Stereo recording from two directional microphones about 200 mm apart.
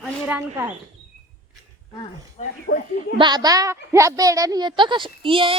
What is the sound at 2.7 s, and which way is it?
Speech, 55° left (ahead or behind).